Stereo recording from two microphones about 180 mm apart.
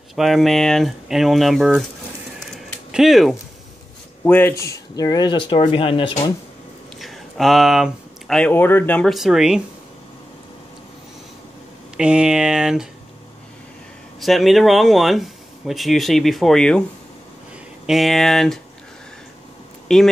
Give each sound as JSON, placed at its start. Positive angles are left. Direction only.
{"t": 0.1, "sound": "speech", "side_deg": 0}
{"t": 2.4, "sound": "a sound", "side_deg": 0}
{"t": 4.2, "sound": "speech", "side_deg": 10}
{"t": 7.0, "sound": "speech", "side_deg": 0}
{"t": 12.0, "sound": "speech", "side_deg": -5}
{"t": 14.2, "sound": "speech", "side_deg": 0}
{"t": 17.8, "sound": "speech", "side_deg": 0}
{"t": 19.9, "sound": "speech", "side_deg": 0}